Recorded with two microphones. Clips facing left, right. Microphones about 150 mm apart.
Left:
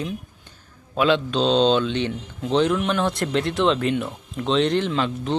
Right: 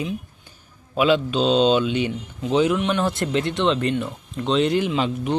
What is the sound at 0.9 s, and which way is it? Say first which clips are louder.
Speech: right 1 dB; 5° right (ahead or behind).